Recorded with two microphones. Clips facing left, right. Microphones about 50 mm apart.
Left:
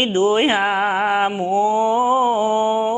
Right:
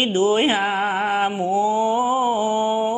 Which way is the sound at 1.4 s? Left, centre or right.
Left.